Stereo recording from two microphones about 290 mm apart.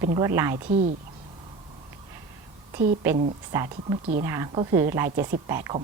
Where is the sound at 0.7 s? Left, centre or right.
Right.